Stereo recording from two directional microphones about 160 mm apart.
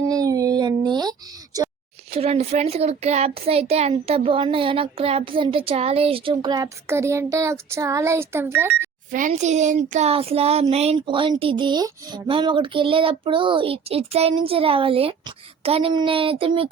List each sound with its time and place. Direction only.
0.0 s a sound: 20° right (ahead or behind)
2.0 s a child's voice: 40° right (ahead or behind); by 8.9 s 15° right (ahead or behind)
9.1 s a child's voice: 50° right (ahead or behind); by 16.6 s 35° right (ahead or behind)